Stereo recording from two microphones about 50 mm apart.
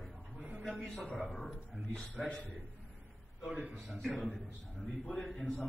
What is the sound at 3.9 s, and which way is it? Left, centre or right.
A man's voice, centre.